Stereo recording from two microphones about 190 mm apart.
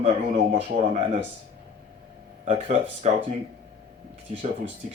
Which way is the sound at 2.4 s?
40° right (ahead or behind).